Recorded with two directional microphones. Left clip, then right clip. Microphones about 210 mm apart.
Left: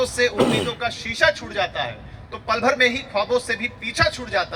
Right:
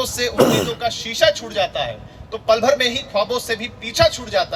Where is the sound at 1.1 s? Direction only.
40° right (ahead or behind).